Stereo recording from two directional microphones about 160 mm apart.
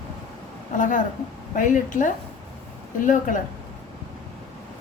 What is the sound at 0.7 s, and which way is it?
A woman's voice, 55° left (ahead or behind).